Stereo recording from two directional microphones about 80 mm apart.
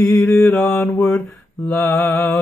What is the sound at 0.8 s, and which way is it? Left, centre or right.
Mantra, left.